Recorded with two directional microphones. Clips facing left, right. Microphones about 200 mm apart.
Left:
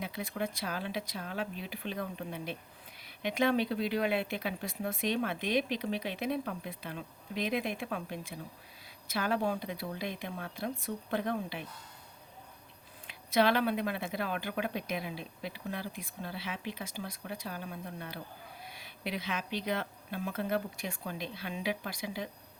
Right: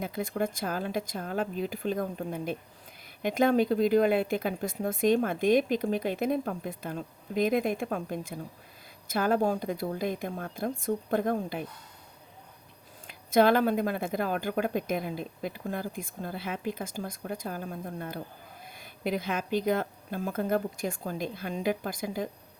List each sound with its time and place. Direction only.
0.0 s speech: 50° right (ahead or behind)
13.1 s speech: 50° right (ahead or behind)